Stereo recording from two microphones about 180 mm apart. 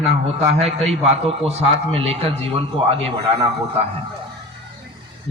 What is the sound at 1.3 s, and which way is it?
A man's voice, 35° right (ahead or behind).